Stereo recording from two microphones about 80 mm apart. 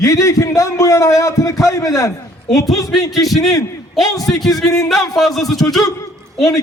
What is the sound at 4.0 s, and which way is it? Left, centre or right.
Speech, left.